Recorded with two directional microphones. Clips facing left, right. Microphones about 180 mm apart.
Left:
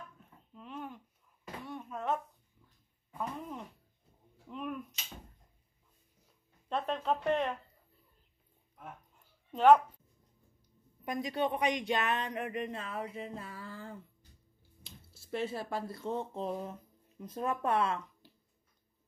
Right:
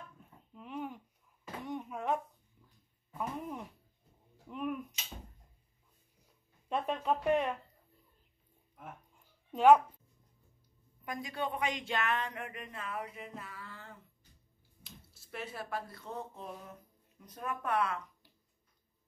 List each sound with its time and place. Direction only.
0.6 s babbling: 15° right (ahead or behind)
1.6 s a sound: 15° right (ahead or behind)
3.2 s speech: 10° right (ahead or behind)
6.7 s speech: 10° right (ahead or behind)
9.5 s speech: 10° right (ahead or behind)
11.1 s speech: 20° left (ahead or behind)
12.4 s a sound: 25° left (ahead or behind)
14.8 s speech: 30° left (ahead or behind)